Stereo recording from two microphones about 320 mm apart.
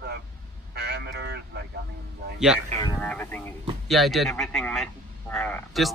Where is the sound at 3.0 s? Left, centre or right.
Centre.